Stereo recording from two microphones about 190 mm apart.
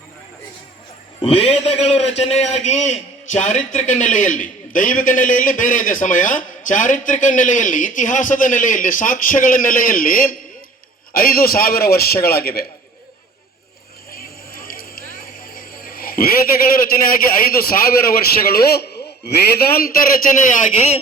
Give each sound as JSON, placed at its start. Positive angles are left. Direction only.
{"t": 1.2, "sound": "a man's voice", "side_deg": 30}
{"t": 14.1, "sound": "a sound", "side_deg": 50}
{"t": 19.8, "sound": "a man's voice", "side_deg": 50}
{"t": 20.7, "sound": "speech", "side_deg": 35}